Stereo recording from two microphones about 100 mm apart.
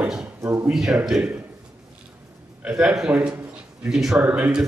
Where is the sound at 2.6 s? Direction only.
5° right (ahead or behind).